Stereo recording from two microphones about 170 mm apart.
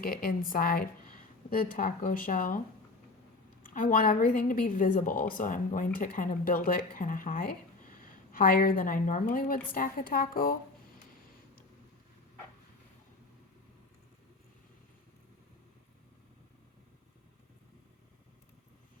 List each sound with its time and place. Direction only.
0.0 s speech: 60° left (ahead or behind)
3.6 s a woman's voice: 50° left (ahead or behind)